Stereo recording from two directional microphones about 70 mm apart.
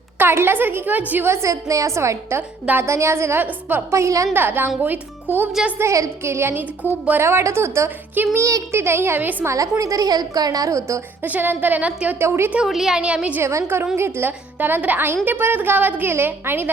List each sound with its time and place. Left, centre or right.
0.2 s a woman's voice: right
1.3 s a woman's voice: right
3.4 s speech: right
3.9 s a woman's voice: right
4.4 s a woman's voice: right
5.8 s a woman's voice: right
8.4 s a woman's voice: right
8.8 s a woman's voice: right
9.5 s a woman's voice: right
11.2 s speech: right
12.2 s a woman's voice: right
12.6 s a woman's voice: centre
13.0 s a woman's voice: centre
13.4 s a woman's voice: right